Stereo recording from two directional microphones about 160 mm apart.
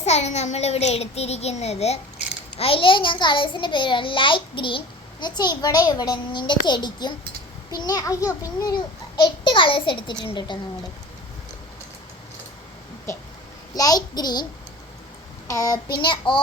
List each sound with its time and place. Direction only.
0.0 s a child's voice: 45° left (ahead or behind)
13.7 s a child's voice: 25° left (ahead or behind)
15.4 s a child's voice: 20° left (ahead or behind)